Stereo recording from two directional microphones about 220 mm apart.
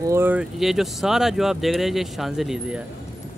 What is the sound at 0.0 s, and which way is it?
Speech, 10° right (ahead or behind).